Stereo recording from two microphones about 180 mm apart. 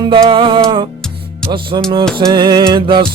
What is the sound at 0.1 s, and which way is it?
Music, 30° right (ahead or behind).